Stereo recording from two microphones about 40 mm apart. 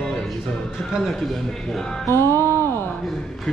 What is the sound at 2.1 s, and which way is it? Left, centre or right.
Music, left.